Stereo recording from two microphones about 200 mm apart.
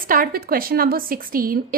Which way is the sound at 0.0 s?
45° right (ahead or behind).